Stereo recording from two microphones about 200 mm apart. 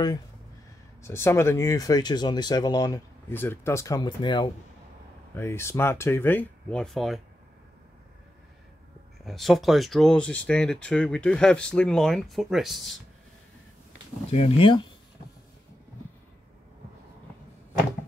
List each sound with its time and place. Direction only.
1.0 s speech: 15° left (ahead or behind)
5.3 s speech: 10° left (ahead or behind)
9.2 s speech: centre (ahead or behind)
14.3 s speech: 30° left (ahead or behind)